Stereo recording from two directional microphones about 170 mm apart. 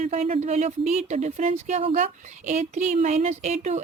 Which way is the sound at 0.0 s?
40° right (ahead or behind).